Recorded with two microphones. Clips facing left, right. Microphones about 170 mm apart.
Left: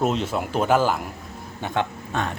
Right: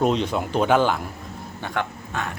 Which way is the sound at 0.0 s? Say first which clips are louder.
Right 2 dB; 5° left (ahead or behind).